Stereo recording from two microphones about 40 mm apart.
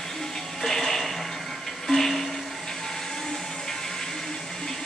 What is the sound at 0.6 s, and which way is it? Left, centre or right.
Music, centre.